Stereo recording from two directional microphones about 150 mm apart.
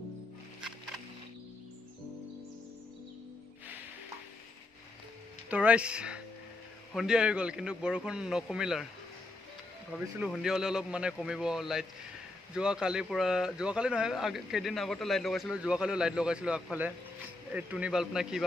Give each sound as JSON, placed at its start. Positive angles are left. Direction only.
{"t": 0.6, "sound": "music", "side_deg": -5}
{"t": 5.5, "sound": "a man's voice", "side_deg": -10}
{"t": 10.3, "sound": "a man's voice", "side_deg": -5}